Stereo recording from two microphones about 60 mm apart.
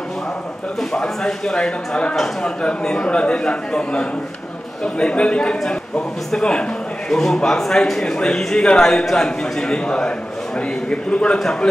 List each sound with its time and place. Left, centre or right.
0.7 s a man's voice: centre